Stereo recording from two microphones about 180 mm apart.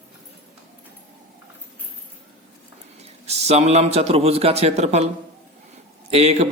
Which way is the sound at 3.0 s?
35° right (ahead or behind).